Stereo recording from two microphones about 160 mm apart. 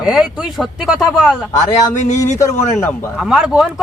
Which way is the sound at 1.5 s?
20° left (ahead or behind).